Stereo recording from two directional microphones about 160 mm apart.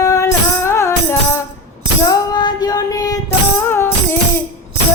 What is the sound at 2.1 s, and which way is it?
Child singing, 25° left (ahead or behind).